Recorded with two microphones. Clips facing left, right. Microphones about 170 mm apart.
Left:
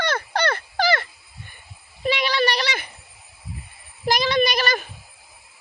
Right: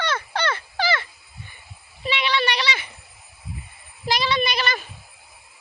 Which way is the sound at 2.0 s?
45° left (ahead or behind).